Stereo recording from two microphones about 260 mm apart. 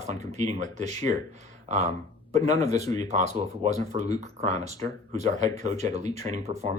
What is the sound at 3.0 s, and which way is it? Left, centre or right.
Speech, right.